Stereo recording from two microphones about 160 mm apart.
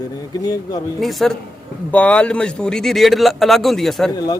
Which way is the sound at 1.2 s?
Centre (ahead or behind).